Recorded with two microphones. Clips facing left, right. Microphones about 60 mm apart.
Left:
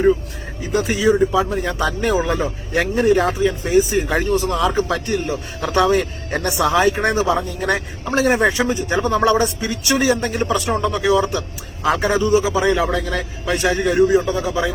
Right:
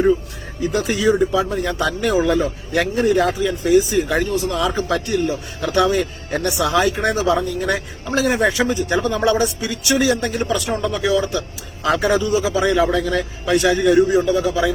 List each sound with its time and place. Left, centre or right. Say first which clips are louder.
0.7 s speech: left 2 dB; left